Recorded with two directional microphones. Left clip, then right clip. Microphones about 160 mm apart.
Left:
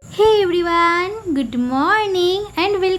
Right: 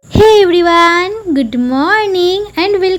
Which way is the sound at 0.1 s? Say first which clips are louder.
Right 8 dB; 40° right (ahead or behind).